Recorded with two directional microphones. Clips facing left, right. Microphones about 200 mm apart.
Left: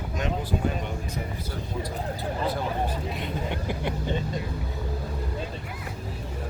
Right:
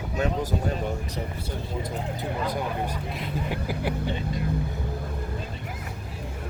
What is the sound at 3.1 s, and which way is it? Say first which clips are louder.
Speech: even; centre (ahead or behind).